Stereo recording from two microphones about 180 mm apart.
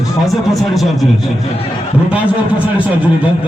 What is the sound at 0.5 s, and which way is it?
Speech, centre (ahead or behind).